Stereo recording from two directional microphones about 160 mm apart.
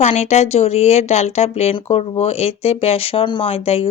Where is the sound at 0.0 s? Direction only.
45° left (ahead or behind).